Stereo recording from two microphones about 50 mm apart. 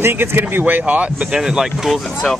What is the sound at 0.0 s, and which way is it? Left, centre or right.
Speech, right.